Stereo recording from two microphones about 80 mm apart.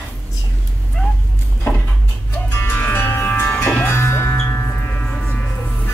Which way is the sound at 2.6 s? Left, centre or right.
Left.